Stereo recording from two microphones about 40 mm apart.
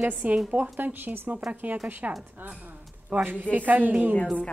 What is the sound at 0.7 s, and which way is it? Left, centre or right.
Speech, right.